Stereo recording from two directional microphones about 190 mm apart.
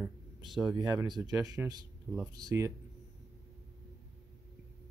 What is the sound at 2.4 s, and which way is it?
Speech, 20° right (ahead or behind).